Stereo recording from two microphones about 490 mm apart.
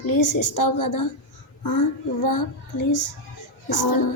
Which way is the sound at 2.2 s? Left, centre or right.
Left.